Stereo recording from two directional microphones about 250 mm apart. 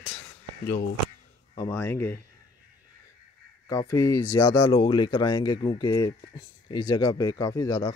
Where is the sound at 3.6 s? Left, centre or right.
Centre.